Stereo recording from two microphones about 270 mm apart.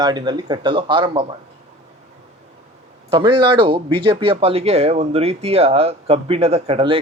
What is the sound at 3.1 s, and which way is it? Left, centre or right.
Speech, centre.